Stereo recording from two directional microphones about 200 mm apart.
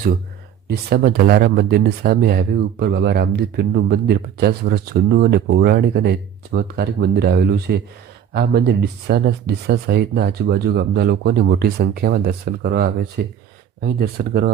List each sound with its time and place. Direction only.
0.7 s speech: 50° right (ahead or behind)